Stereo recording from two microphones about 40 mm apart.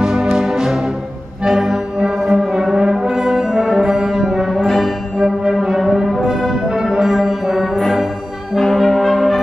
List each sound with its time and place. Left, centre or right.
0.0 s music: centre
1.4 s brass instrument: centre
4.5 s music: centre
5.2 s brass instrument: centre